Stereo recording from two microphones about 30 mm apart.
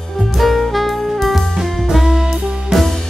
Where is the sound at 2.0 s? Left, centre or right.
Centre.